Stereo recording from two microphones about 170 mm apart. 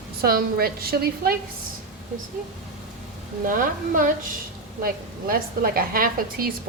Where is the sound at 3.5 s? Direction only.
55° right (ahead or behind).